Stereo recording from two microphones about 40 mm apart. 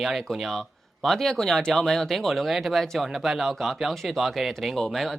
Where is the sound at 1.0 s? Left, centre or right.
Centre.